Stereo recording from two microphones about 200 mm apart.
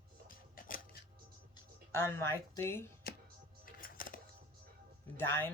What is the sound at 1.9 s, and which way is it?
Speech, 10° left (ahead or behind).